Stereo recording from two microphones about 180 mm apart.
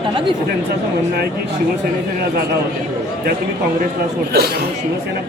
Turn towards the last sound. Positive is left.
turn(degrees=-65)  # may be behind; listen again after turning